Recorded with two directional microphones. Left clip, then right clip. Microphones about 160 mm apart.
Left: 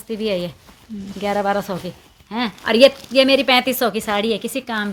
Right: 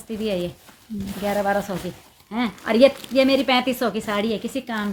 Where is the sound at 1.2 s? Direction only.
80° left.